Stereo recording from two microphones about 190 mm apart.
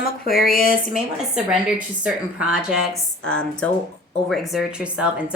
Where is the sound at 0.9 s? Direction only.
5° right (ahead or behind).